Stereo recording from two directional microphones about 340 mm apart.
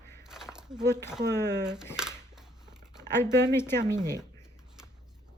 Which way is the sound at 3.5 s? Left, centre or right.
Centre.